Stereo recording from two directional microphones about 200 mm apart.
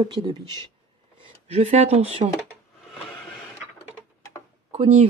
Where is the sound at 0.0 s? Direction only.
20° right (ahead or behind).